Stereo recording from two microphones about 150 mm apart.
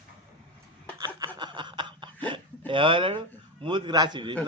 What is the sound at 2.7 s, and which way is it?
A man's voice, 35° right (ahead or behind).